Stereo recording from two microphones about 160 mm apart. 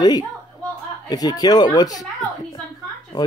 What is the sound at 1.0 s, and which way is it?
Speech, 25° left (ahead or behind).